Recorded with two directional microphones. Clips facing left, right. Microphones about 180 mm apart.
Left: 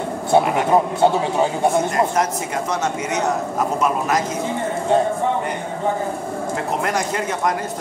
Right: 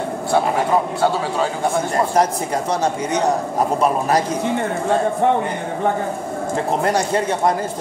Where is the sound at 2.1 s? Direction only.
35° right (ahead or behind).